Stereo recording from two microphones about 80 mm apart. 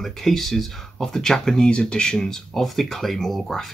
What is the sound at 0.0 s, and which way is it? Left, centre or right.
Speech, centre.